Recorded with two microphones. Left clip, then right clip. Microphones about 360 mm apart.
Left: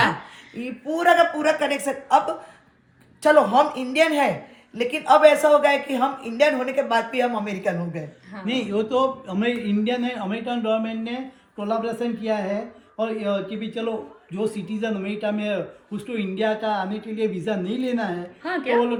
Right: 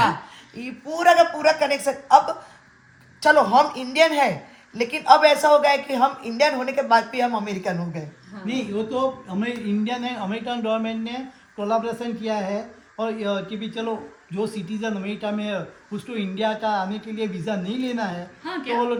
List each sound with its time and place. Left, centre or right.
0.5 s speech: centre
8.4 s speech: centre
18.4 s a woman's voice: centre